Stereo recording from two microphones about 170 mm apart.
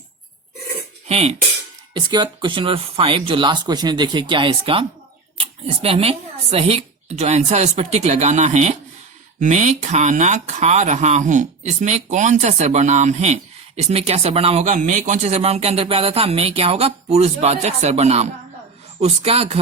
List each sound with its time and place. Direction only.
1.0 s speech: 40° right (ahead or behind)
1.9 s speech: 25° right (ahead or behind)